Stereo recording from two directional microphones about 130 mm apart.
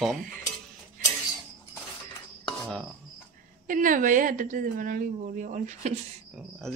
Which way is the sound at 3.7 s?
90° right.